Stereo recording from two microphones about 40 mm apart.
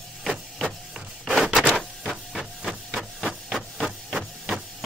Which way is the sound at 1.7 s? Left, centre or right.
Centre.